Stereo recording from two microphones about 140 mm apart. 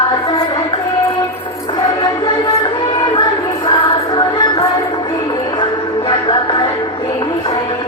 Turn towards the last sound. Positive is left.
turn(degrees=35)  # may be behind; listen again after turning